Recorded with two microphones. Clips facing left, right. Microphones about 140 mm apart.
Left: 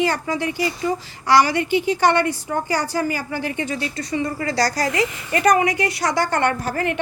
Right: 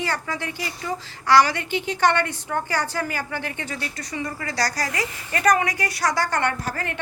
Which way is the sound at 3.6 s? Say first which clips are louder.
Left 6 dB; 25° left (ahead or behind).